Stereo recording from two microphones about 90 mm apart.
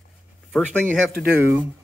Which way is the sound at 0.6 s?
15° left (ahead or behind).